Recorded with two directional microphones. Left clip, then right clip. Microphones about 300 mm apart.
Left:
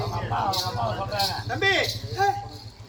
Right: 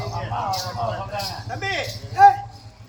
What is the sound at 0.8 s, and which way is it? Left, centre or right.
A man's voice, centre.